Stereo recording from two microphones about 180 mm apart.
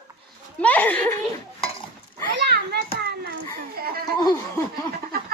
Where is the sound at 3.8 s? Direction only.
55° right (ahead or behind).